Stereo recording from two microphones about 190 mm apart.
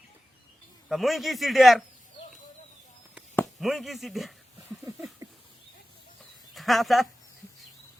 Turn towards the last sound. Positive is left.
turn(degrees=0)  # may be behind; listen again after turning